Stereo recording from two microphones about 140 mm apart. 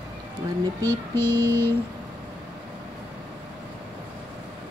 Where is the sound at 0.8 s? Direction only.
15° left (ahead or behind).